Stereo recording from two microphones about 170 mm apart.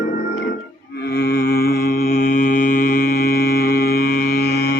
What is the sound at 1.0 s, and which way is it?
Mantra, 65° left (ahead or behind).